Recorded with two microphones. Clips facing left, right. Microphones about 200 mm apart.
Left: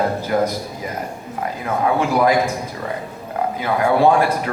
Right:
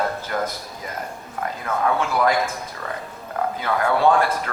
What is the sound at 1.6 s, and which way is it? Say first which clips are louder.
Speech: left 3 dB; 15° left (ahead or behind).